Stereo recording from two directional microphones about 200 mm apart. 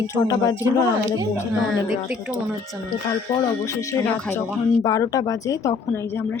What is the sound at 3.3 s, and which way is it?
Speech, 15° left (ahead or behind).